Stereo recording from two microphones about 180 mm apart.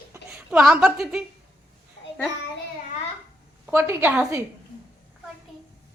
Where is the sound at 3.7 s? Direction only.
15° right (ahead or behind).